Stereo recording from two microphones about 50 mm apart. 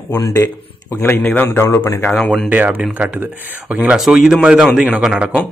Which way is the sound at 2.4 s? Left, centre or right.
Right.